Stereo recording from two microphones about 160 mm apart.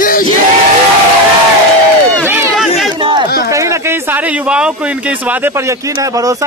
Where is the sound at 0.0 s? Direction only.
60° left (ahead or behind).